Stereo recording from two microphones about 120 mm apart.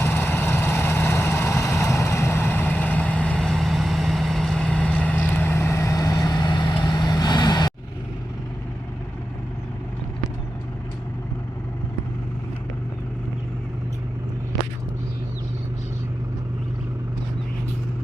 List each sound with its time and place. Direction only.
0.0 s vehicle: 15° left (ahead or behind); by 7.7 s 35° left (ahead or behind)